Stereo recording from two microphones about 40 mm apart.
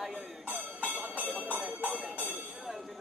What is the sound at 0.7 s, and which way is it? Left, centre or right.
Music, right.